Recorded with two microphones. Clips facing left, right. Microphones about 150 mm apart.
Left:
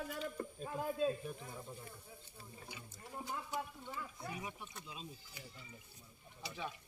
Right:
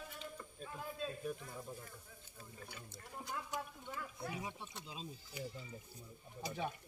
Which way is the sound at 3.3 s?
5° left (ahead or behind).